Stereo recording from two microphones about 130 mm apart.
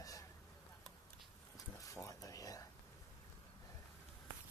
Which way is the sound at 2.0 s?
25° left (ahead or behind).